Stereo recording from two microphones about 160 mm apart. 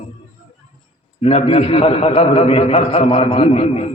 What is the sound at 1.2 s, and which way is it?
A man's voice, 40° left (ahead or behind).